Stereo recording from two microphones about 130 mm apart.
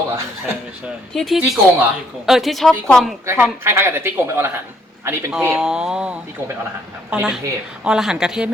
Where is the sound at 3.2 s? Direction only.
20° right (ahead or behind).